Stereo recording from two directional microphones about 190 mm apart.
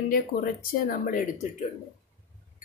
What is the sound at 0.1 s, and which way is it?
A woman's voice, 50° left (ahead or behind).